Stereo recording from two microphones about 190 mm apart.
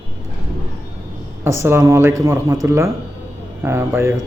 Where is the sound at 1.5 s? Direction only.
15° right (ahead or behind).